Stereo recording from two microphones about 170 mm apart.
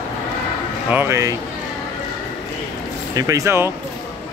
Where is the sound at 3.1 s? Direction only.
20° right (ahead or behind).